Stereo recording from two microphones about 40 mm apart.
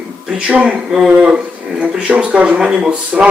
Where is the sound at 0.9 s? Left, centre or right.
Centre.